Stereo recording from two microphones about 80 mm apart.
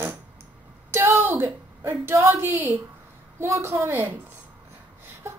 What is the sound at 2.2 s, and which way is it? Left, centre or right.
Speech, right.